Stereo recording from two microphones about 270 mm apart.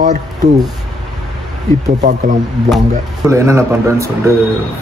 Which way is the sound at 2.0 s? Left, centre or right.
Right.